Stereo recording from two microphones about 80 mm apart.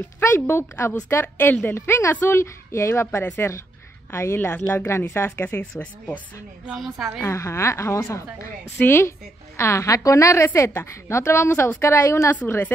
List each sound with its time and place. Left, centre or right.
0.2 s a woman's voice: left
5.8 s speech: centre
6.7 s a woman's voice: centre
7.2 s a woman's voice: left
12.4 s a woman's voice: left